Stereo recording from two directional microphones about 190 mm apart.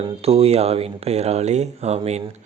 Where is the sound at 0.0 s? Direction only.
30° right (ahead or behind).